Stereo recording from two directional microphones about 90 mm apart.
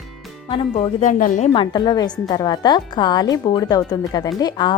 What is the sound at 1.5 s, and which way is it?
A woman's voice, 55° left (ahead or behind).